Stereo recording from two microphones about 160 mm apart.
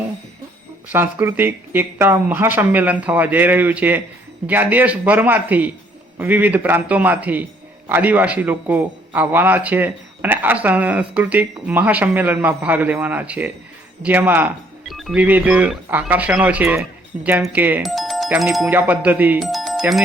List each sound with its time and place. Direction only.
0.9 s a man's voice: 15° right (ahead or behind)
14.8 s a man's voice: centre (ahead or behind)
17.8 s music: centre (ahead or behind)
18.3 s a man's voice: centre (ahead or behind)
19.4 s music: centre (ahead or behind)